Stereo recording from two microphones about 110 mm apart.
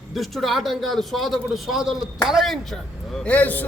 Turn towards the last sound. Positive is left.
turn(degrees=15)  # may be behind; listen again after turning